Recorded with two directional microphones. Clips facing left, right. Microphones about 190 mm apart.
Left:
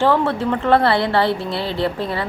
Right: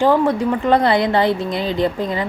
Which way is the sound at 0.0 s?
15° right (ahead or behind).